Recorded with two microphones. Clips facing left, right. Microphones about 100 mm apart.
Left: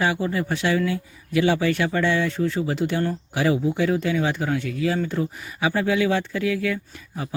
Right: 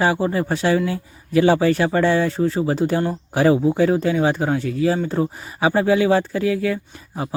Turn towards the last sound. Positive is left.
turn(degrees=-30)  # may be behind; listen again after turning